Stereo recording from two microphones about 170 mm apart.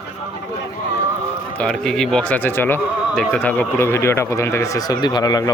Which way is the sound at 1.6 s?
5° left (ahead or behind).